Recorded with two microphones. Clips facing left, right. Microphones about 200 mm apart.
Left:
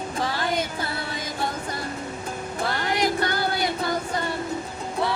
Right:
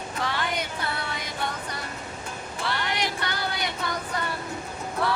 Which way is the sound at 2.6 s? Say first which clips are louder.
Left 4 dB; 45° left (ahead or behind).